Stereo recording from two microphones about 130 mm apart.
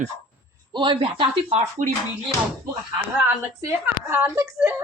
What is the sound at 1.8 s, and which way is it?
Speech, 75° right (ahead or behind).